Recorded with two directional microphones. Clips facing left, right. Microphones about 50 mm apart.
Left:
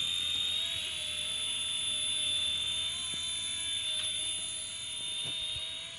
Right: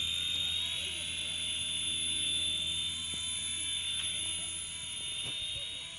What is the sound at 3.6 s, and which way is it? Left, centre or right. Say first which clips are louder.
Ratchet: left 1 dB; right.